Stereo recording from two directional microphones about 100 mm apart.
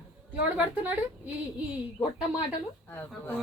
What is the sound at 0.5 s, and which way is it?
Speech, 15° right (ahead or behind).